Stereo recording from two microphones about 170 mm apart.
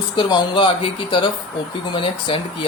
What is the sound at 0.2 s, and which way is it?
Speech, 30° left (ahead or behind).